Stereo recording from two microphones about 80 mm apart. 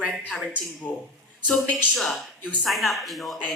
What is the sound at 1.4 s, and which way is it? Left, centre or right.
Speech, centre.